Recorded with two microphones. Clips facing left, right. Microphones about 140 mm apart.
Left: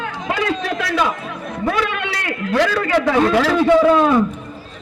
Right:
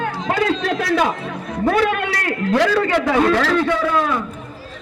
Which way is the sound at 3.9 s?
25° left (ahead or behind).